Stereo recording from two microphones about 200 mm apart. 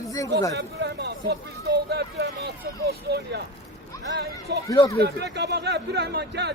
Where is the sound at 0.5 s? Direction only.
55° right (ahead or behind).